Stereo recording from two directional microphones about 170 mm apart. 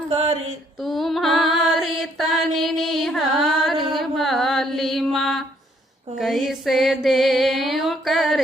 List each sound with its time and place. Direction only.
0.1 s mantra: 35° right (ahead or behind)
0.8 s music: centre (ahead or behind)
3.9 s mantra: centre (ahead or behind)
6.1 s a sound: centre (ahead or behind)